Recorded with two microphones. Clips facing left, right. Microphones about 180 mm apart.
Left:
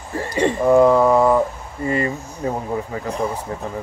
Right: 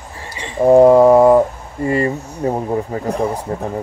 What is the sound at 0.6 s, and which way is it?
Speech, 35° right (ahead or behind).